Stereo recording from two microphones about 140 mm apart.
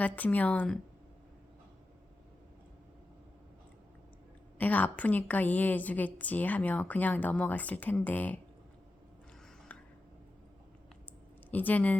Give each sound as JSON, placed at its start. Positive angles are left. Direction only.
{"t": 0.0, "sound": "a woman's voice", "side_deg": 10}
{"t": 4.5, "sound": "a woman's voice", "side_deg": 10}
{"t": 11.5, "sound": "a woman's voice", "side_deg": 10}